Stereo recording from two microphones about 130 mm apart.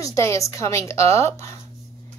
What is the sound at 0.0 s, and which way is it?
A woman's voice, 25° left (ahead or behind).